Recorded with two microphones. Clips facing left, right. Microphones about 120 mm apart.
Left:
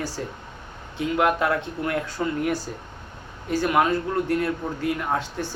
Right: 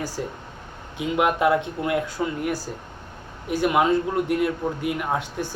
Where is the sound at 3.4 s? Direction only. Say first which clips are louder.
Right 1 dB; 15° right (ahead or behind).